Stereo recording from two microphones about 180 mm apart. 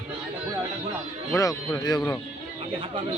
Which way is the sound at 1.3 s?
15° left (ahead or behind).